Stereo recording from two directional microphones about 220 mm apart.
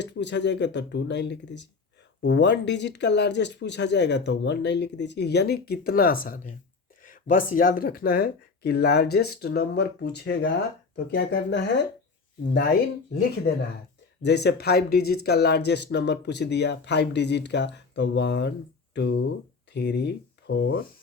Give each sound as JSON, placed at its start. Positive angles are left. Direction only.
{"t": 0.0, "sound": "speech", "side_deg": 50}
{"t": 14.3, "sound": "speech", "side_deg": 50}